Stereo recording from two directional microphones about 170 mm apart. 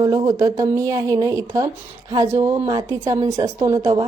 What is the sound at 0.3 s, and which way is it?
A woman's voice, 20° right (ahead or behind).